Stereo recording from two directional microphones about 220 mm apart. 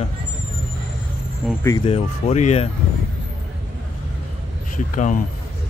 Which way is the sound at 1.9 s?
30° left (ahead or behind).